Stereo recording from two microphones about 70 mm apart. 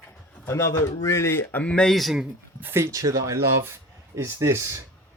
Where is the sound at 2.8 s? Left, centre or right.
Right.